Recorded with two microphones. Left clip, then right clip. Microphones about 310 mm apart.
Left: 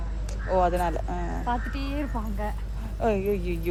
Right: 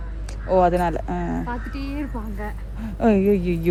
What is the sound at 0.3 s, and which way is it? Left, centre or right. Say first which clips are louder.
Speech: right 6 dB; right.